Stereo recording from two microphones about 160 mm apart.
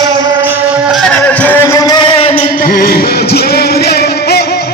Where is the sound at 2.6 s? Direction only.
70° left (ahead or behind).